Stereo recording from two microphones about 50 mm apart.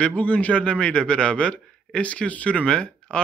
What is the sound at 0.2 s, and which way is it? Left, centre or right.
Speech, left.